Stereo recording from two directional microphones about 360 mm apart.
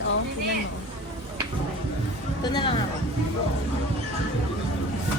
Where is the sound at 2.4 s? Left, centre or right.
Centre.